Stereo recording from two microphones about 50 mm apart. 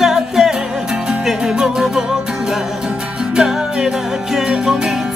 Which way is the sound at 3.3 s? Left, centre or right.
Centre.